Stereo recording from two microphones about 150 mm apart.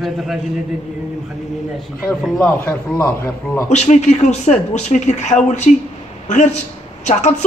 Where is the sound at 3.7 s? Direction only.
50° left (ahead or behind).